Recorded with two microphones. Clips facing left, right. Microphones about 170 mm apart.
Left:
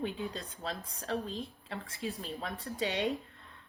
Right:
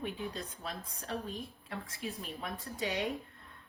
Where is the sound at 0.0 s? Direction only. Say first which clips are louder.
Left 2 dB; 30° left (ahead or behind).